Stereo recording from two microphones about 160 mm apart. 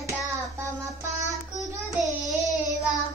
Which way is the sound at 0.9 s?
20° right (ahead or behind).